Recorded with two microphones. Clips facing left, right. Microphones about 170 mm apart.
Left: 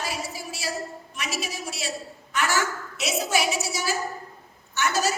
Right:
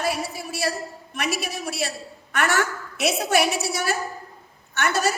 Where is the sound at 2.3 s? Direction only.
60° right (ahead or behind).